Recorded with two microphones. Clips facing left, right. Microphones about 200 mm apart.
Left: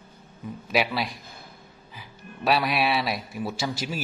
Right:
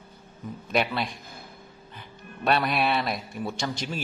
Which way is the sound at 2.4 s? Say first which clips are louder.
Left 1 dB; centre (ahead or behind).